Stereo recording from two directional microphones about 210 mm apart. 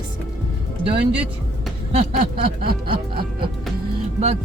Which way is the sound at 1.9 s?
30° right (ahead or behind).